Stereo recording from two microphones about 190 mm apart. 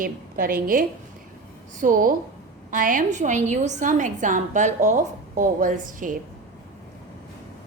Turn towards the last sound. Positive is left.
turn(degrees=-45)  # may be behind; listen again after turning